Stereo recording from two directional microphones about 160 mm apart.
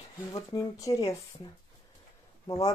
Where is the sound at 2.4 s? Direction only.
25° left (ahead or behind).